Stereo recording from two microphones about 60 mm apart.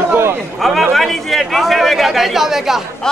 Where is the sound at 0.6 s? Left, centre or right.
Centre.